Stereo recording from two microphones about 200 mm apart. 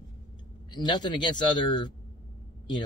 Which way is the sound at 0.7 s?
20° left (ahead or behind).